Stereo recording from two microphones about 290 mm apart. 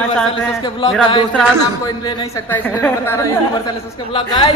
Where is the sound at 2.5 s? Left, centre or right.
Centre.